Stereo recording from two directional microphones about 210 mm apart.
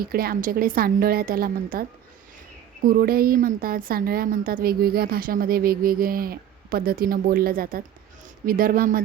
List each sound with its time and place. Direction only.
0.0 s a woman's voice: 45° right (ahead or behind)